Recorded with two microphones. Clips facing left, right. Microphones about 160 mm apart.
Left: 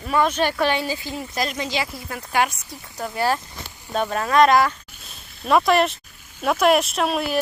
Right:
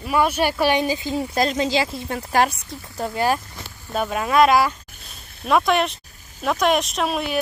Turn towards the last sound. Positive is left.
turn(degrees=0)  # may be behind; listen again after turning